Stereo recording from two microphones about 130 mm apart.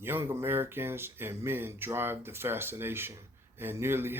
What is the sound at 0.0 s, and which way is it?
Speech, 15° right (ahead or behind).